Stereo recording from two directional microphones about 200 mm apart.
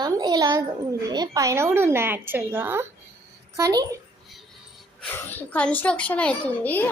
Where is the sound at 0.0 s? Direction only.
20° right (ahead or behind).